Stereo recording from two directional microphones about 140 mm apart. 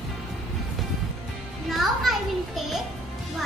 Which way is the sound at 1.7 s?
Centre (ahead or behind).